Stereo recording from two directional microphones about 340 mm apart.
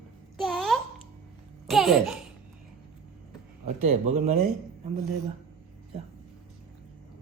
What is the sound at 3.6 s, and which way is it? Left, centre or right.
Speech, centre.